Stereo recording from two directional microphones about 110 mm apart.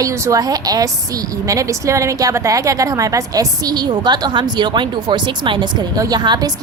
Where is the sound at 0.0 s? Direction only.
30° right (ahead or behind).